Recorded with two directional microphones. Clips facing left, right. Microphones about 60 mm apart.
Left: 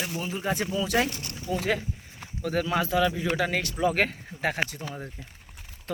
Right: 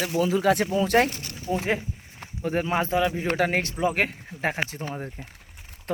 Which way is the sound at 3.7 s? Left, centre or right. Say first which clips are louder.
Left 2 dB; centre.